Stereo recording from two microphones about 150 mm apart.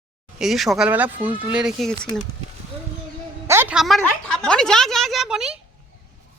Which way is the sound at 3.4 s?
15° right (ahead or behind).